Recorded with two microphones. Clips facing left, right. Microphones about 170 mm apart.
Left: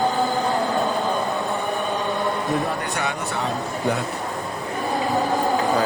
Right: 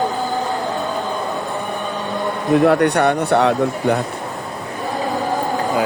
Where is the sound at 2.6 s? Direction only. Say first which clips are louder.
Right 12 dB; 75° right (ahead or behind).